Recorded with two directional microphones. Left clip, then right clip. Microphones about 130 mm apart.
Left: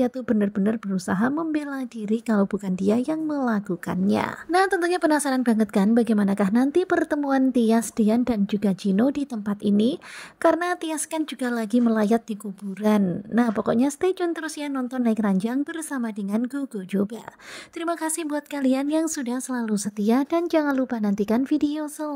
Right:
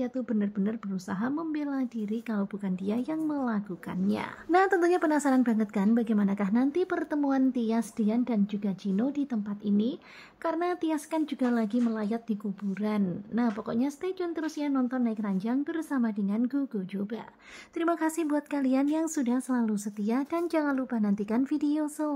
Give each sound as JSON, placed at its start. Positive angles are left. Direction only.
{"t": 0.0, "sound": "a woman's voice", "side_deg": 45}
{"t": 4.5, "sound": "a woman's voice", "side_deg": 35}
{"t": 17.7, "sound": "a woman's voice", "side_deg": 40}